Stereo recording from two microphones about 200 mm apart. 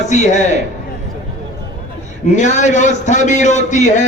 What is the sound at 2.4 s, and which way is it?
Speech, 35° left (ahead or behind).